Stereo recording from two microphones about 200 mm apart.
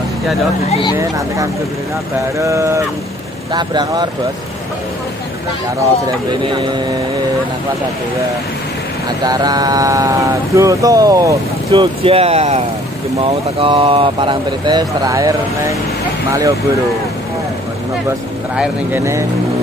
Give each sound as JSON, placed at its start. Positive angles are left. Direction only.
{"t": 0.7, "sound": "speech", "side_deg": 25}
{"t": 0.9, "sound": "speech", "side_deg": -15}
{"t": 6.4, "sound": "speech", "side_deg": -25}
{"t": 9.2, "sound": "speech", "side_deg": -20}
{"t": 18.6, "sound": "speech", "side_deg": -10}